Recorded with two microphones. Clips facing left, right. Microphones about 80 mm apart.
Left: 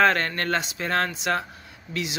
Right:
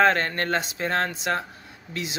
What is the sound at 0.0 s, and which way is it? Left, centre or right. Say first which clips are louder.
Speech: even; right.